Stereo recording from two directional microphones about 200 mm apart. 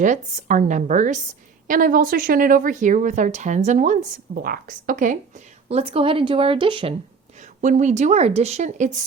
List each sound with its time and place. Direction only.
0.0 s a woman's voice: 40° right (ahead or behind)
5.6 s speech: 30° right (ahead or behind)
7.6 s a woman's voice: 40° right (ahead or behind)